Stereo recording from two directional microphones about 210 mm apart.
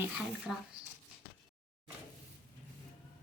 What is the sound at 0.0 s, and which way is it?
Speech, 5° right (ahead or behind).